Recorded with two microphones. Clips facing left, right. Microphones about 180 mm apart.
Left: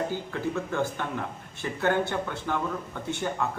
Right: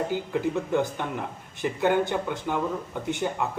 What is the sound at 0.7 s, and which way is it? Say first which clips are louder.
Speech: right 3 dB; 15° right (ahead or behind).